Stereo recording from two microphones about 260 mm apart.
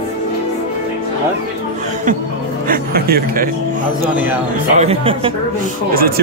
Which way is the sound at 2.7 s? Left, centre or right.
Right.